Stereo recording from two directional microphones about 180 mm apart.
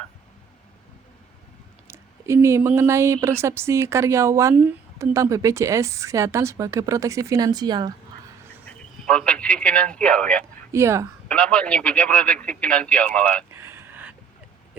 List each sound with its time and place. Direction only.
1.9 s speech: 15° right (ahead or behind)
8.6 s speech: 5° left (ahead or behind)
10.7 s speech: 15° right (ahead or behind)
11.3 s a man's voice: 5° left (ahead or behind)
13.5 s a sound: 15° right (ahead or behind)